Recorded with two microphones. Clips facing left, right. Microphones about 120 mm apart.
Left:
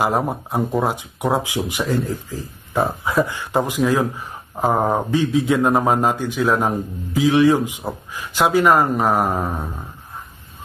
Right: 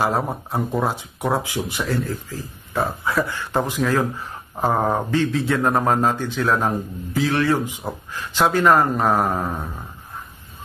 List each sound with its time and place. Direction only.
0.0 s speech: 15° left (ahead or behind)